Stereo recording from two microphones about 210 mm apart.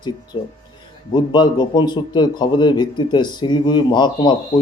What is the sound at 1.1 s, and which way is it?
Speech, 20° left (ahead or behind).